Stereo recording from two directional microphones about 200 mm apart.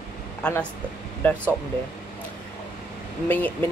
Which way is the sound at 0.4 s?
5° left (ahead or behind).